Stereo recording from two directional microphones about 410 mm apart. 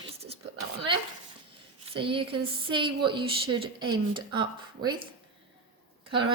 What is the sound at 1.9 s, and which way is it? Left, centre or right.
A woman's voice, centre.